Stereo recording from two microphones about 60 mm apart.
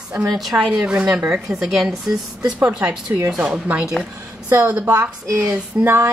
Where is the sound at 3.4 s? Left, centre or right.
Right.